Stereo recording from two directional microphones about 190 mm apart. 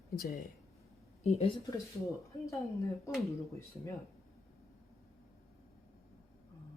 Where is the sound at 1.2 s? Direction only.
35° left (ahead or behind).